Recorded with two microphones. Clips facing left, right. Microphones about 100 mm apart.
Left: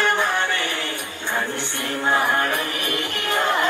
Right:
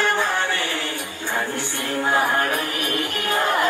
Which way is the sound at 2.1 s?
20° right (ahead or behind).